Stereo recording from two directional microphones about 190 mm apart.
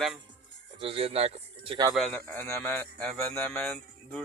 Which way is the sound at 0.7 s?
30° right (ahead or behind).